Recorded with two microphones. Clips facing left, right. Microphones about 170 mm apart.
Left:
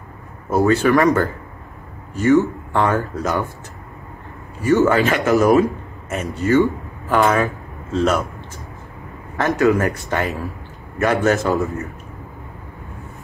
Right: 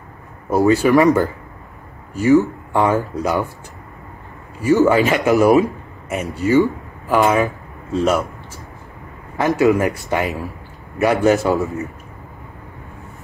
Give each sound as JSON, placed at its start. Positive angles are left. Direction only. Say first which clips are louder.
{"t": 0.5, "sound": "a man's voice", "louder": "right 1 dB", "side_deg": -15}
{"t": 4.8, "sound": "a man's voice", "louder": "right 2 dB", "side_deg": -10}
{"t": 7.4, "sound": "a sound", "louder": "right 1 dB", "side_deg": -15}
{"t": 9.6, "sound": "a man's voice", "louder": "right 1 dB", "side_deg": -15}